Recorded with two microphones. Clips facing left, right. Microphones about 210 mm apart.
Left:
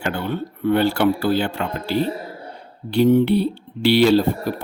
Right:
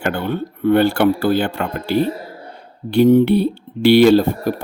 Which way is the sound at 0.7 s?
55° right (ahead or behind).